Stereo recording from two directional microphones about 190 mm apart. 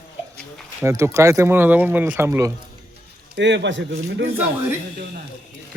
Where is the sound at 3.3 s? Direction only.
65° right (ahead or behind).